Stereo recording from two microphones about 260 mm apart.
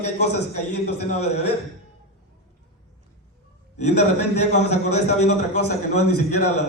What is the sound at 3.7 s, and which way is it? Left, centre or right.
Speech, left.